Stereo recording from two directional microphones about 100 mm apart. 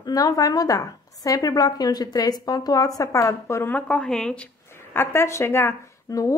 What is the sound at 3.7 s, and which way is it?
Speech, 10° left (ahead or behind).